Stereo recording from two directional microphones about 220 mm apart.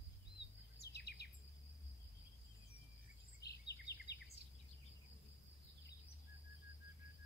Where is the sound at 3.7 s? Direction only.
50° left (ahead or behind).